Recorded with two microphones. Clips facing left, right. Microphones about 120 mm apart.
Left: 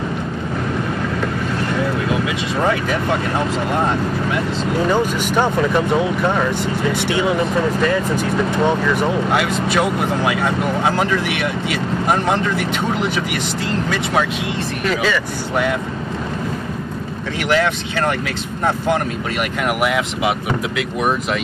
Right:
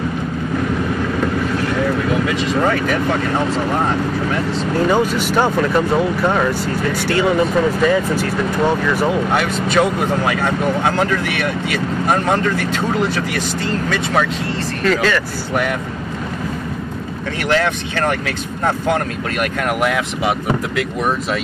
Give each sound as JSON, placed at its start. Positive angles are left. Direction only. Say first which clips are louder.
{"t": 2.2, "sound": "speech", "louder": "right 2 dB", "side_deg": 15}
{"t": 4.9, "sound": "speech", "louder": "right 1 dB", "side_deg": -10}
{"t": 7.1, "sound": "speech", "louder": "right 5 dB", "side_deg": 0}
{"t": 9.3, "sound": "speech", "louder": "right 1 dB", "side_deg": 10}
{"t": 14.9, "sound": "speech", "louder": "right 3 dB", "side_deg": 10}
{"t": 19.8, "sound": "speech", "louder": "even", "side_deg": 15}